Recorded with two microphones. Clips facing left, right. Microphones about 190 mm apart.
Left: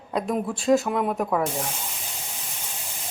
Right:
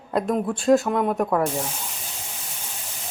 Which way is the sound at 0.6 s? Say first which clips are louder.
Right 2 dB; centre (ahead or behind).